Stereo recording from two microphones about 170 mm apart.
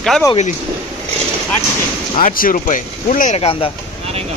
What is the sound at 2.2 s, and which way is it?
Speech, 55° left (ahead or behind).